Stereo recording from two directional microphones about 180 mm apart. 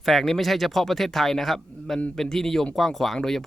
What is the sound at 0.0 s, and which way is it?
Speech, centre (ahead or behind).